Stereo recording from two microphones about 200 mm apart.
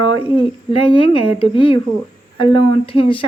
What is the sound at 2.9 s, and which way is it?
Speech, 25° left (ahead or behind).